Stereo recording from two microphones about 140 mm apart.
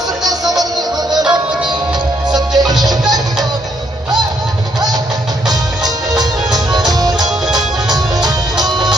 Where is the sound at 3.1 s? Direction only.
30° right (ahead or behind).